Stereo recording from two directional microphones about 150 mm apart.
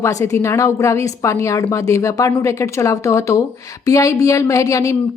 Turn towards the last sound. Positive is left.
turn(degrees=20)  # may be behind; listen again after turning